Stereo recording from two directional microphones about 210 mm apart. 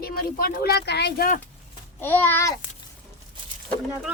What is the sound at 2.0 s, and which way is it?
Babbling, 10° left (ahead or behind).